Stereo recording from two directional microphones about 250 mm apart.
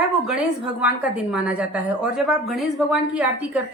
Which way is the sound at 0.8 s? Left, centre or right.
Centre.